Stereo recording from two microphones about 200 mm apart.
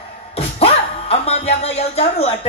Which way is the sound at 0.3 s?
30° left (ahead or behind).